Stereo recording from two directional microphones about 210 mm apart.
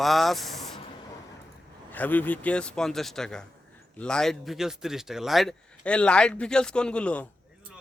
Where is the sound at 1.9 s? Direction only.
10° left (ahead or behind).